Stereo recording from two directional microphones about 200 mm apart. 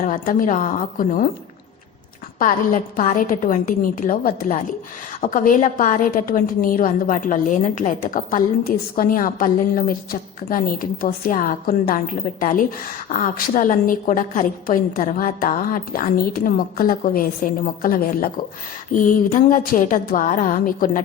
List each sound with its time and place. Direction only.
0.0 s a woman's voice: 40° left (ahead or behind)
2.4 s a woman's voice: 40° left (ahead or behind)